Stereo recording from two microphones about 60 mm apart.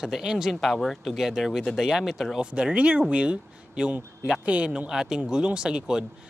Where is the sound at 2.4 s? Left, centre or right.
Centre.